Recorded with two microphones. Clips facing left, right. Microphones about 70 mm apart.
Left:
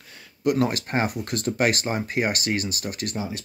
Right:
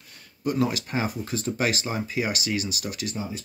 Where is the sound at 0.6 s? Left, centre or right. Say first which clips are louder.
Left 2 dB; left.